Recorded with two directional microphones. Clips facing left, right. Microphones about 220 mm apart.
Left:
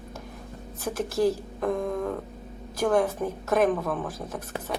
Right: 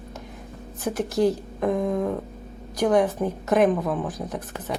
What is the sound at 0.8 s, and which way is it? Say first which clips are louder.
A woman's voice: right 3 dB; 20° right (ahead or behind).